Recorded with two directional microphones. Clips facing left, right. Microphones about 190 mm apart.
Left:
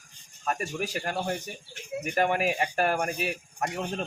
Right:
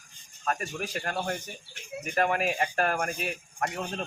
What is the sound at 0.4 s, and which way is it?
A man's voice, 10° left (ahead or behind).